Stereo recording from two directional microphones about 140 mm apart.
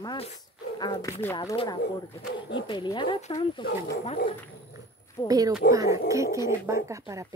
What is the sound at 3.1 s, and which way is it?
Speech, 55° left (ahead or behind).